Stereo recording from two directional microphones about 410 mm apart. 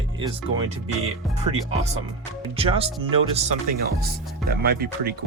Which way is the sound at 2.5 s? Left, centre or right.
Centre.